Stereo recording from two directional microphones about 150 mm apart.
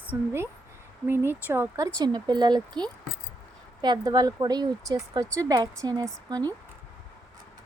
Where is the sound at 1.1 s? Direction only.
15° right (ahead or behind).